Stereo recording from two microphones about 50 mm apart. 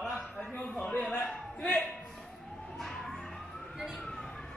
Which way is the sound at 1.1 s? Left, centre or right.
Centre.